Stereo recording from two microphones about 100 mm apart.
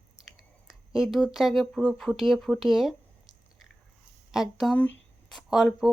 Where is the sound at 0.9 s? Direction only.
5° right (ahead or behind).